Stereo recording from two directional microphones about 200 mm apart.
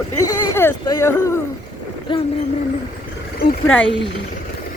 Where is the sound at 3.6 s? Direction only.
5° left (ahead or behind).